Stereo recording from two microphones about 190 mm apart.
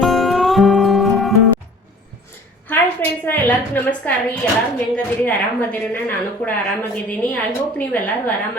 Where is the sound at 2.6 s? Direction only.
10° left (ahead or behind).